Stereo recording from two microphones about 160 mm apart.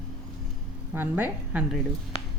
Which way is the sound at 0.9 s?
10° right (ahead or behind).